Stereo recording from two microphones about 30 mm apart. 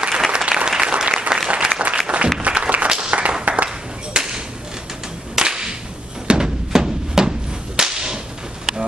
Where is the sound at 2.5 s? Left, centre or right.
Right.